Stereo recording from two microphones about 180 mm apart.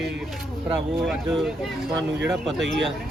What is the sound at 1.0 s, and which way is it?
Speech, centre (ahead or behind).